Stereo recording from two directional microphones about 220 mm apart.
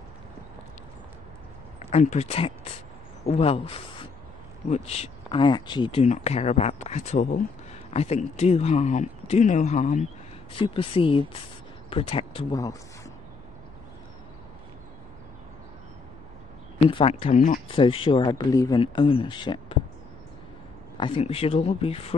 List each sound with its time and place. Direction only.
1.8 s speech: 30° left (ahead or behind)
10.5 s speech: 25° left (ahead or behind)
16.7 s speech: 30° left (ahead or behind)
21.0 s speech: 25° left (ahead or behind)